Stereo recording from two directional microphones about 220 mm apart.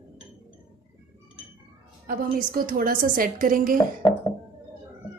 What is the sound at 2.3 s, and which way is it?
A woman's voice, 40° right (ahead or behind).